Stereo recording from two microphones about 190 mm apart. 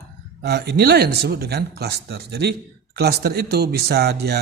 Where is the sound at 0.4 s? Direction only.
60° right (ahead or behind).